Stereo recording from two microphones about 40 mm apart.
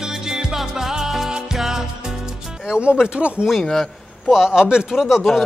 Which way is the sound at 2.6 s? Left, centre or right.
Right.